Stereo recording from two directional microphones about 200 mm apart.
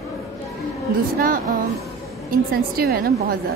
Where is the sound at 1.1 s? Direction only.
45° right (ahead or behind).